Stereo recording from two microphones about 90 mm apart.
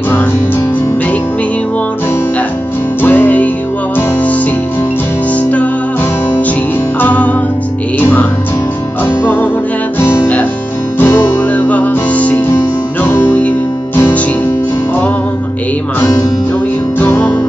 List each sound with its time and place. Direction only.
3.0 s music: 20° left (ahead or behind)
7.0 s music: 15° left (ahead or behind)
11.5 s music: 20° left (ahead or behind)
17.0 s music: 15° left (ahead or behind)